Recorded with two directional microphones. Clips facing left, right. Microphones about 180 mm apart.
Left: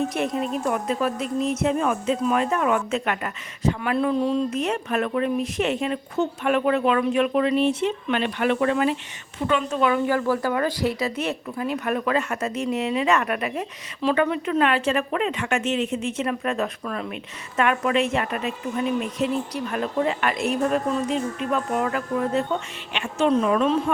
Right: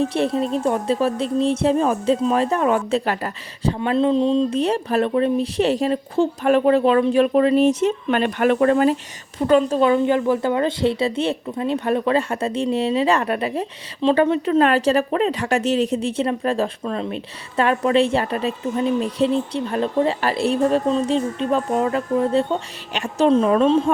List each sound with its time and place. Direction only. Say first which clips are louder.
0.0 s speech: right 4 dB; 30° right (ahead or behind)